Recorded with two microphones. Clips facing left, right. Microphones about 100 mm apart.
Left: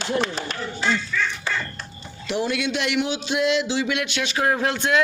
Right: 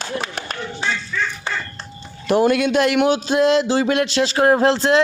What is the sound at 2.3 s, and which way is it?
A man's voice, 45° right (ahead or behind).